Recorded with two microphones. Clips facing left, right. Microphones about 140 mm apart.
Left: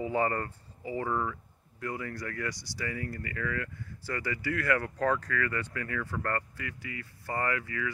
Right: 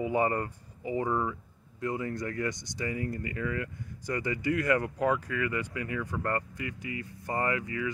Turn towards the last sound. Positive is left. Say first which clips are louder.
# right 2 dB
turn(degrees=-25)  # may be behind; listen again after turning